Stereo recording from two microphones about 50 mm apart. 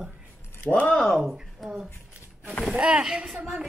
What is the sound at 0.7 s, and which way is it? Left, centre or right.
Speech, left.